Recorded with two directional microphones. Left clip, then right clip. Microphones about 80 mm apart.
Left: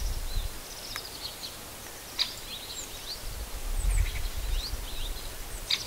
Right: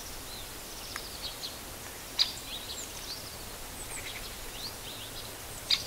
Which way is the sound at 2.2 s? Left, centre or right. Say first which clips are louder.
Right 2 dB; right.